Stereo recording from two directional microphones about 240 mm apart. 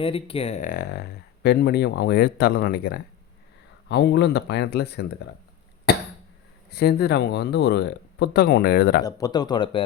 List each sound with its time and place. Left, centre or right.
0.0 s speech: left
5.9 s cough: left
6.7 s speech: left
9.0 s speech: centre